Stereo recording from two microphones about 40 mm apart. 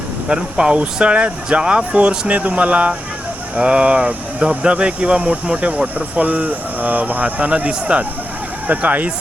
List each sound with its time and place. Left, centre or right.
0.3 s speech: right